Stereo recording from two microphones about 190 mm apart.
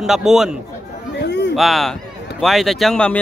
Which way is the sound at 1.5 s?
Centre (ahead or behind).